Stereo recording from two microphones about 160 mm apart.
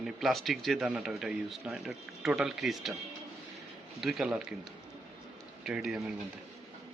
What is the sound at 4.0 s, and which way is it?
Speech, centre (ahead or behind).